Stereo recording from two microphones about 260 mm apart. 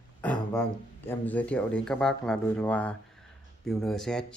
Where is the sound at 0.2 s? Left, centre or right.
Centre.